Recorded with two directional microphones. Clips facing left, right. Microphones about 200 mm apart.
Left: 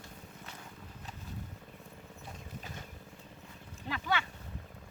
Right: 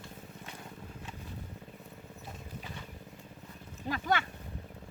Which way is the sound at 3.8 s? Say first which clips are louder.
Right 3 dB; 45° right (ahead or behind).